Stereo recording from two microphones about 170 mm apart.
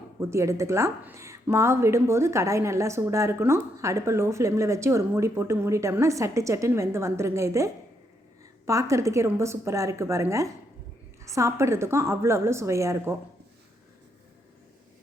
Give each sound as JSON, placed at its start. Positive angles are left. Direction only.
{"t": 0.2, "sound": "a woman's voice", "side_deg": -15}